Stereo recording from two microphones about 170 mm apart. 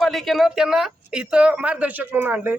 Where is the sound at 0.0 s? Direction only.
Centre (ahead or behind).